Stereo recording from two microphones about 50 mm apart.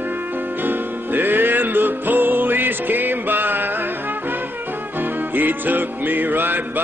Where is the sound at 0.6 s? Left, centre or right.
Right.